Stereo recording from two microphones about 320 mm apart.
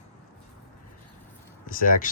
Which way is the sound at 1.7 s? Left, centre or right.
Left.